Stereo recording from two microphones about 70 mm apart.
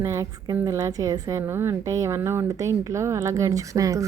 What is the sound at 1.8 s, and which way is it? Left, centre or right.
A woman's voice, right.